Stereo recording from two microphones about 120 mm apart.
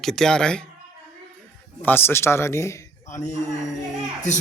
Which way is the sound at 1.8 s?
20° left (ahead or behind).